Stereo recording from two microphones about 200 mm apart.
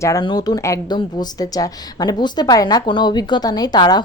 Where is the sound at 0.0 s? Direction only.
20° left (ahead or behind).